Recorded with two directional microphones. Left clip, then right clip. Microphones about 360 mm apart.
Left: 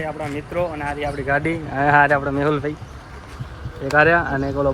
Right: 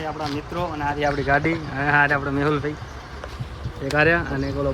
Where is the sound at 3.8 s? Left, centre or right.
Centre.